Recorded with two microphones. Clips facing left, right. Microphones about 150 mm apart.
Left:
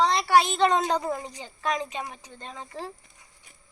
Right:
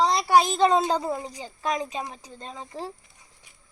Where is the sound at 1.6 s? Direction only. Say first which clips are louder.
Right 1 dB; 10° right (ahead or behind).